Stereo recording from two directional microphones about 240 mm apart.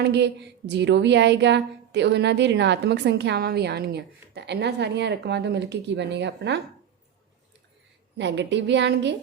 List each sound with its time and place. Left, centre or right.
0.0 s a woman's voice: right
8.2 s a woman's voice: right